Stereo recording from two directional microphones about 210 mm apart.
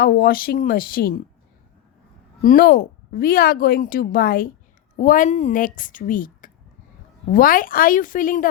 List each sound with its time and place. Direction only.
0.0 s a woman's voice: 45° left (ahead or behind)
2.4 s a woman's voice: 40° left (ahead or behind)